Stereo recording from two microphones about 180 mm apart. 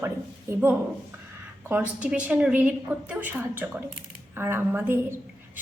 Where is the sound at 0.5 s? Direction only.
15° right (ahead or behind).